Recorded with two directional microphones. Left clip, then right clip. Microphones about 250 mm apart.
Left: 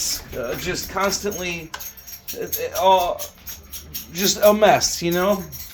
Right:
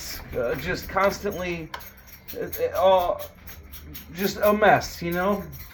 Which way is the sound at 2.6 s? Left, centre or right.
Centre.